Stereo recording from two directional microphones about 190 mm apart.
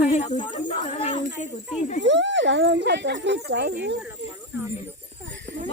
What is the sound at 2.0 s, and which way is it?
Speech, 70° right (ahead or behind).